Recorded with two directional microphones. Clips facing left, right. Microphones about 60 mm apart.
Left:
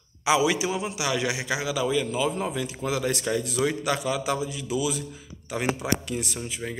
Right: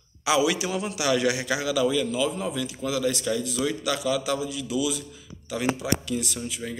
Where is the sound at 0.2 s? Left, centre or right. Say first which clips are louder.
Left 1 dB; left.